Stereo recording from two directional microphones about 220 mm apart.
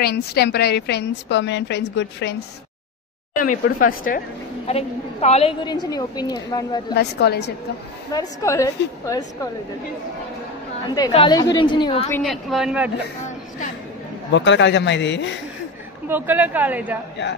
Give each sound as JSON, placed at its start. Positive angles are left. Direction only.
{"t": 0.0, "sound": "a woman's voice", "side_deg": 45}
{"t": 3.6, "sound": "speech", "side_deg": 40}
{"t": 4.6, "sound": "a woman's voice", "side_deg": 30}
{"t": 7.0, "sound": "a woman's voice", "side_deg": 50}
{"t": 8.1, "sound": "a woman's voice", "side_deg": 15}
{"t": 11.1, "sound": "a woman's voice", "side_deg": 20}
{"t": 12.1, "sound": "a man's voice", "side_deg": 0}
{"t": 14.3, "sound": "a woman's voice", "side_deg": 55}
{"t": 16.1, "sound": "a woman's voice", "side_deg": -10}